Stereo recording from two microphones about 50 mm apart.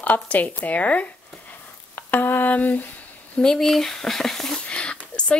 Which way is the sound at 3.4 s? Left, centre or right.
Centre.